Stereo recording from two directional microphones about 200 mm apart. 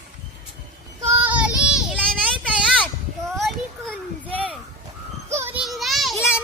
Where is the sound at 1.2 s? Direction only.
5° right (ahead or behind).